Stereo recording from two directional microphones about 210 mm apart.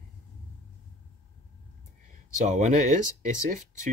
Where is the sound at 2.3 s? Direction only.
35° right (ahead or behind).